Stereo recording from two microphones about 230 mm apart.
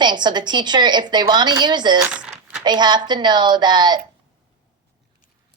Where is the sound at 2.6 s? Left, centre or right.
Centre.